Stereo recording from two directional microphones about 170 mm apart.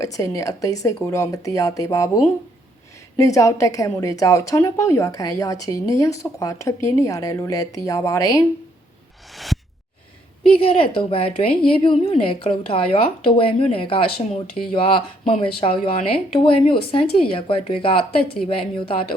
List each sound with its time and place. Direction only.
0.0 s a woman's voice: 20° left (ahead or behind)
3.2 s a woman's voice: 20° left (ahead or behind)
9.3 s a sound: centre (ahead or behind)
10.6 s a woman's voice: 30° left (ahead or behind)